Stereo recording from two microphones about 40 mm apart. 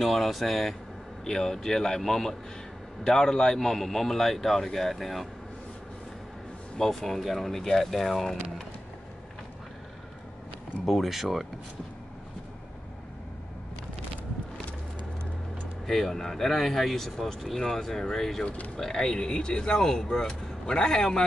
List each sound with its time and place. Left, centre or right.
0.0 s speech: centre
6.8 s speech: centre
10.9 s speech: centre
15.9 s speech: centre